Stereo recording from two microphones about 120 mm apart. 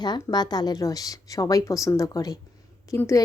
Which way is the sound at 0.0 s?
35° left (ahead or behind).